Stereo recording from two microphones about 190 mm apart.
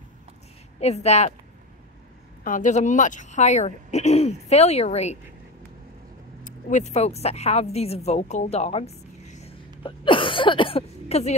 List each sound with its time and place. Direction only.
0.7 s speech: 35° left (ahead or behind)
2.4 s speech: 45° left (ahead or behind)
6.4 s a woman's voice: 40° left (ahead or behind)